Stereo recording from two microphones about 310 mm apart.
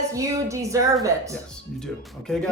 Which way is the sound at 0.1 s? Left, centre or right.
Centre.